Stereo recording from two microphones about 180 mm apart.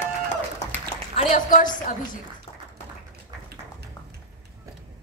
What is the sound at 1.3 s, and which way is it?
Speech, 45° left (ahead or behind).